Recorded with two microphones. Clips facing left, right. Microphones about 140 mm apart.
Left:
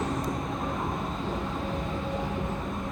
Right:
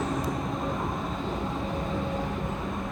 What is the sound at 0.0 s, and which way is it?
Vehicle, centre (ahead or behind).